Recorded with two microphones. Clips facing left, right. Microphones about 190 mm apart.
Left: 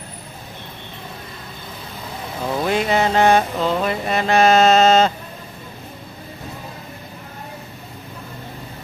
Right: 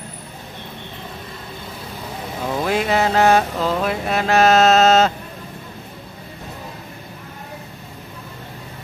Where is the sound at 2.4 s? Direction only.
Centre (ahead or behind).